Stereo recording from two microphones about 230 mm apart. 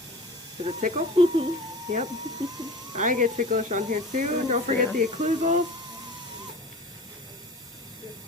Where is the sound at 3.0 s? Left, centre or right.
Right.